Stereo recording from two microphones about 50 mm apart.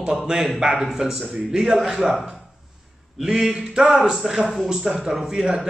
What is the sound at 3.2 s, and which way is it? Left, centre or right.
A man's voice, centre.